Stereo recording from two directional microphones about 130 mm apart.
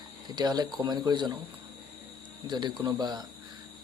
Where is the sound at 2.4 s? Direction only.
35° right (ahead or behind).